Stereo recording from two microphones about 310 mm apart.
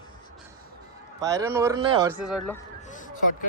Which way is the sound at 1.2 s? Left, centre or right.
Centre.